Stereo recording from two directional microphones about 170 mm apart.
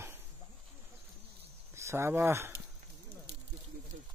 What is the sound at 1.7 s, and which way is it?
Speech, 15° right (ahead or behind).